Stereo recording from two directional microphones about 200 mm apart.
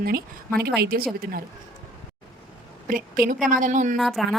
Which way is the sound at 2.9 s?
45° right (ahead or behind).